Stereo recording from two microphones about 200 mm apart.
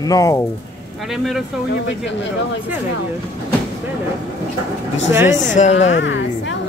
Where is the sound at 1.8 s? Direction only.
65° left (ahead or behind).